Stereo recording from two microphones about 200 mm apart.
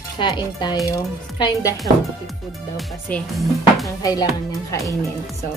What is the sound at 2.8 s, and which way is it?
Speech, 5° left (ahead or behind).